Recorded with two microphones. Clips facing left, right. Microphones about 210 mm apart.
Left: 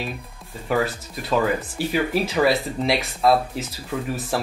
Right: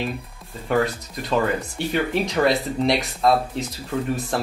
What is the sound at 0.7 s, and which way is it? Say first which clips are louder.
Speech: right 1 dB; centre (ahead or behind).